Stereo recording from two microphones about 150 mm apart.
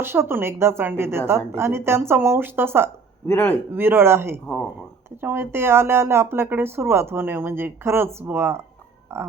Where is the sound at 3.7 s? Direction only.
15° right (ahead or behind).